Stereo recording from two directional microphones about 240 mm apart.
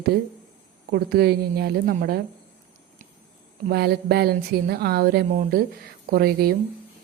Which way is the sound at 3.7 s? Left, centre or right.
Right.